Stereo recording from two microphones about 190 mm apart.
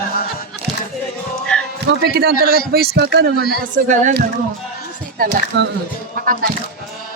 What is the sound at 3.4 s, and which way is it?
Speech, 55° left (ahead or behind).